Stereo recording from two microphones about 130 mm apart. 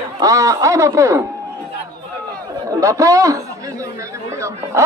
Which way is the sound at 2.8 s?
25° right (ahead or behind).